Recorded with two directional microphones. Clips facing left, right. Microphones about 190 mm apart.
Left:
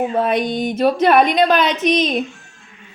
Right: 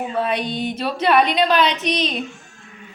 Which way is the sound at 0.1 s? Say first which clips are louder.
Left 4 dB; 45° left (ahead or behind).